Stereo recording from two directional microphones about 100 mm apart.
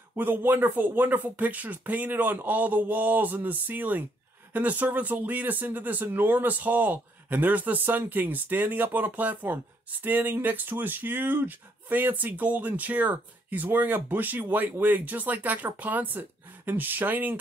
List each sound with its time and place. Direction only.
0.1 s speech: 20° right (ahead or behind)